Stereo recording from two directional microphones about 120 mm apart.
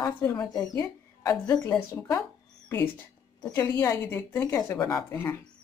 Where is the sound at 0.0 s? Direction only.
30° left (ahead or behind).